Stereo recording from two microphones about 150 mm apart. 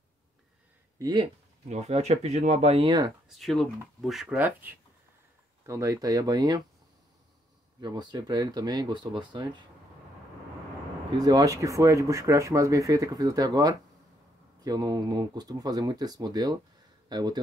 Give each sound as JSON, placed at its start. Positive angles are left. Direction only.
{"t": 0.9, "sound": "speech", "side_deg": -30}
{"t": 1.7, "sound": "speech", "side_deg": -45}
{"t": 2.8, "sound": "speech", "side_deg": -25}
{"t": 3.3, "sound": "speech", "side_deg": 0}
{"t": 5.7, "sound": "speech", "side_deg": -20}
{"t": 7.8, "sound": "speech", "side_deg": -25}
{"t": 11.1, "sound": "speech", "side_deg": -25}